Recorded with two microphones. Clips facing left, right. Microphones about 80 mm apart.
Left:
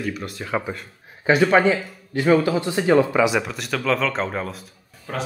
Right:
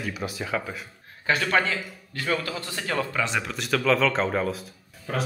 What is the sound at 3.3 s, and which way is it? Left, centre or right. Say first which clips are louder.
Speech: left 4 dB; centre.